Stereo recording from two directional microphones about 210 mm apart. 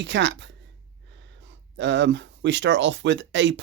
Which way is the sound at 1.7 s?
60° right (ahead or behind).